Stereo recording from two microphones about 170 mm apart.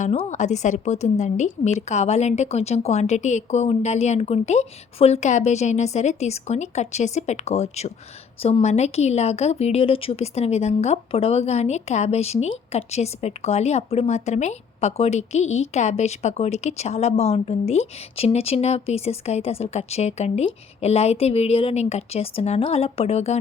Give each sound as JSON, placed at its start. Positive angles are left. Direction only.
{"t": 0.0, "sound": "a woman's voice", "side_deg": 45}